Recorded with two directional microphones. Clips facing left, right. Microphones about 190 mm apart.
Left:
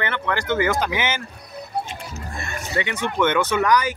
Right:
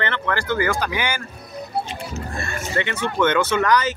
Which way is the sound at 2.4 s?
15° left (ahead or behind).